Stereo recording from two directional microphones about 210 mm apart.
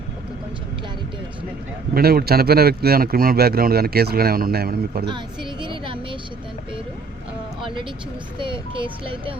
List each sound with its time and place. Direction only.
1.9 s speech: 45° right (ahead or behind)
5.0 s speech: 20° right (ahead or behind)
8.4 s speech: 25° right (ahead or behind)